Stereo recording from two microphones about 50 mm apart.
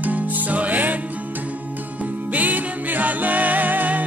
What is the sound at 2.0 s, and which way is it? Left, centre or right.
Music, right.